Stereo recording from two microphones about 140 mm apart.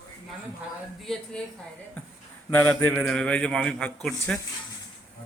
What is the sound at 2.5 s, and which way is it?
Speech, 15° left (ahead or behind).